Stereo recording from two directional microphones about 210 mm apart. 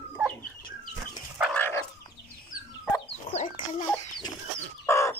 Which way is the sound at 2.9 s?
25° left (ahead or behind).